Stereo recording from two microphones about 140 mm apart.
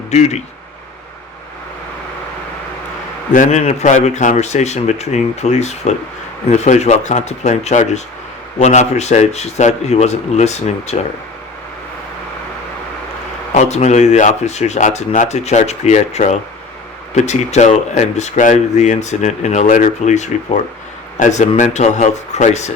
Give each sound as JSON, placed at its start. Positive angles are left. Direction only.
{"t": 0.1, "sound": "speech", "side_deg": 50}
{"t": 3.3, "sound": "speech", "side_deg": 55}
{"t": 13.5, "sound": "speech", "side_deg": 55}